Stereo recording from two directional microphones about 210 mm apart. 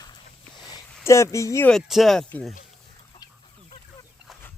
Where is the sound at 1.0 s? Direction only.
15° left (ahead or behind).